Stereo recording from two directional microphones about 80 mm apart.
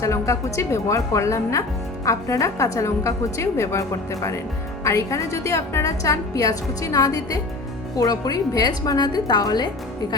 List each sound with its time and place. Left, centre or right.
0.0 s a woman's voice: left